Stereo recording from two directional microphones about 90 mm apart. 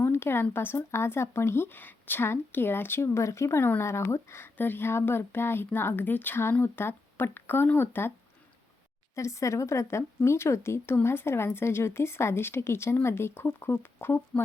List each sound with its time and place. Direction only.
0.0 s a sound: 25° left (ahead or behind)
0.5 s speech: 25° left (ahead or behind)
9.1 s a woman's voice: 35° left (ahead or behind)